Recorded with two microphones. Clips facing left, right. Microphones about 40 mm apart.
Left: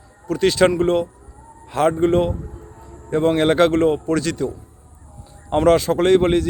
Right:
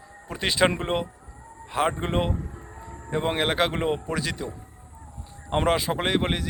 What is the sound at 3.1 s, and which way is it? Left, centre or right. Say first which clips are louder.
A man's voice: left 8 dB; centre.